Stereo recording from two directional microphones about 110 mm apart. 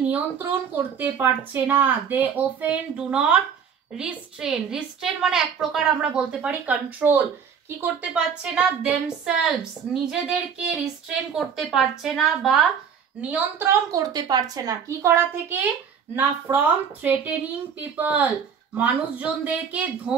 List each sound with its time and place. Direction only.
0.1 s speech: 15° right (ahead or behind)
10.0 s a sound: 5° right (ahead or behind)
13.3 s speech: 20° right (ahead or behind)
13.9 s speech: 35° right (ahead or behind); by 20.2 s 10° right (ahead or behind)